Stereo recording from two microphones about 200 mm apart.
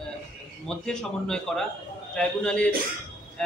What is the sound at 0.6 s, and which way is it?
A man's voice, 5° left (ahead or behind).